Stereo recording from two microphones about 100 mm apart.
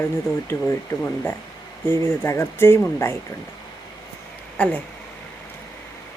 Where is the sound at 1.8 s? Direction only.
25° left (ahead or behind).